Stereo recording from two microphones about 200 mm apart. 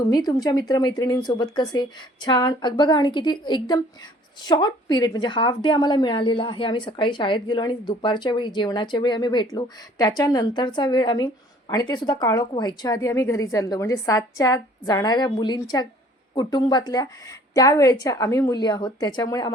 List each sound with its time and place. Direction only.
0.0 s a woman's voice: 20° left (ahead or behind)